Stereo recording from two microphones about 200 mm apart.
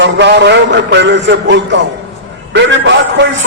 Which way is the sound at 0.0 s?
60° right (ahead or behind).